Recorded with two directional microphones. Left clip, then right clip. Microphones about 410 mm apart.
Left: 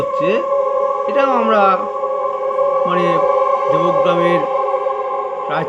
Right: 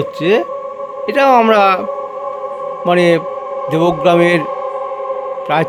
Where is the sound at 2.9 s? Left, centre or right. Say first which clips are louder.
Right 2 dB; right.